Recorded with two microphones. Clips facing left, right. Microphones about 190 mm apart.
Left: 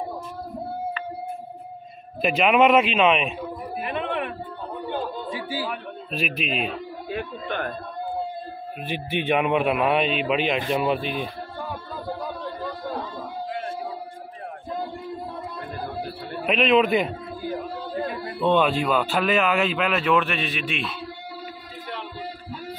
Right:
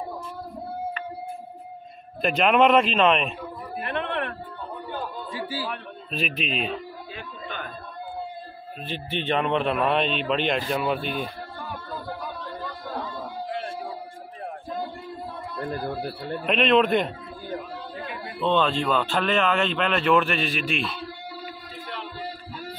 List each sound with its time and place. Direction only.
2.2 s a man's voice: 5° left (ahead or behind)
3.8 s a sound: 5° left (ahead or behind)
4.8 s chatter: 20° left (ahead or behind)
5.7 s a man's voice: 5° left (ahead or behind)
7.1 s a sound: 60° left (ahead or behind)
8.8 s a man's voice: 10° left (ahead or behind)
16.4 s a man's voice: 5° left (ahead or behind)
18.4 s a man's voice: 10° left (ahead or behind)